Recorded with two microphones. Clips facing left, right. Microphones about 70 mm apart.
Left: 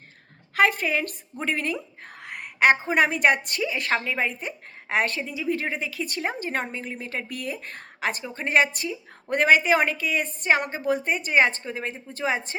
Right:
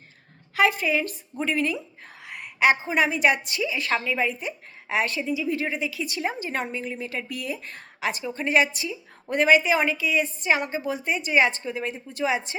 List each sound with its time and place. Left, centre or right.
0.5 s a woman's voice: left